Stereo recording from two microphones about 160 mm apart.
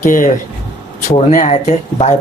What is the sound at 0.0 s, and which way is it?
Speech, 55° left (ahead or behind).